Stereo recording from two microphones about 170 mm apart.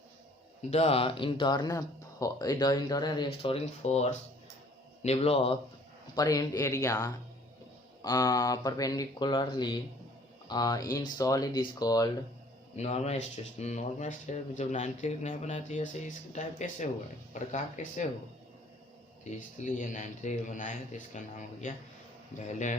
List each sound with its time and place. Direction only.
0.7 s speech: 35° left (ahead or behind)
3.4 s speech: 35° left (ahead or behind)
6.1 s speech: 20° left (ahead or behind)
12.7 s speech: 40° left (ahead or behind)
19.2 s speech: 45° left (ahead or behind)